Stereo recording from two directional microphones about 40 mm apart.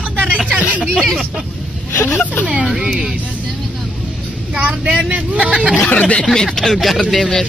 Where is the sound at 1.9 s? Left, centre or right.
Left.